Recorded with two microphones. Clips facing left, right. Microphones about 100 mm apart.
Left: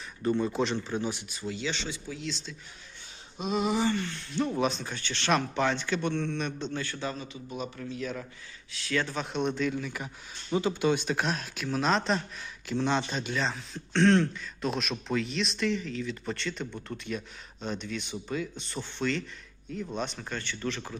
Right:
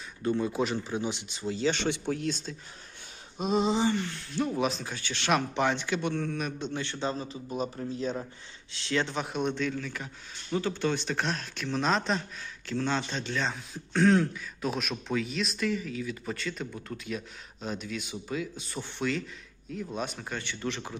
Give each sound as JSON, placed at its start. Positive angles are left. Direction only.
{"t": 0.2, "sound": "speech", "side_deg": 0}
{"t": 1.7, "sound": "speech", "side_deg": -60}
{"t": 3.3, "sound": "a sound", "side_deg": -40}
{"t": 4.4, "sound": "speech", "side_deg": 0}
{"t": 6.8, "sound": "a man's voice", "side_deg": -25}
{"t": 8.7, "sound": "a sound", "side_deg": -25}
{"t": 9.2, "sound": "speech", "side_deg": 0}
{"t": 9.7, "sound": "speech", "side_deg": 10}
{"t": 12.7, "sound": "speech", "side_deg": 15}